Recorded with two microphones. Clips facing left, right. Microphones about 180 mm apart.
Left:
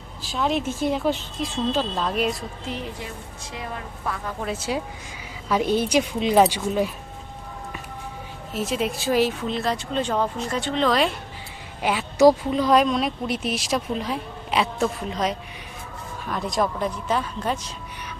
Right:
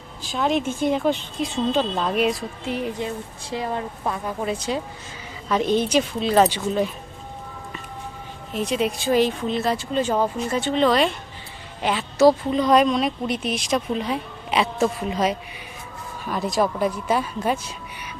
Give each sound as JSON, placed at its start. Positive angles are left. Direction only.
{"t": 0.2, "sound": "speech", "side_deg": 0}
{"t": 3.5, "sound": "a woman's voice", "side_deg": -30}
{"t": 4.4, "sound": "speech", "side_deg": 5}
{"t": 8.5, "sound": "speech", "side_deg": 0}
{"t": 11.8, "sound": "a woman's voice", "side_deg": 10}